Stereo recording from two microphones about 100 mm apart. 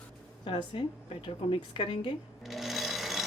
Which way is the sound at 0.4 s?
65° left (ahead or behind).